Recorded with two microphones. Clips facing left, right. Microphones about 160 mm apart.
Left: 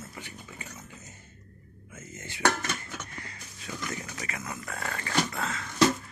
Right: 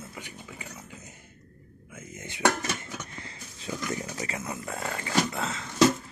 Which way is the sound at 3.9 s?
25° right (ahead or behind).